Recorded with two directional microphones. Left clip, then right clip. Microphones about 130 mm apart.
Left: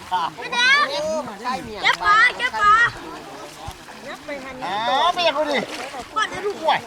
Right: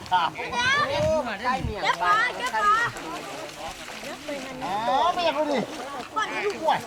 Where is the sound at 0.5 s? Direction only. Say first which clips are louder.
Left 7 dB; 40° left (ahead or behind).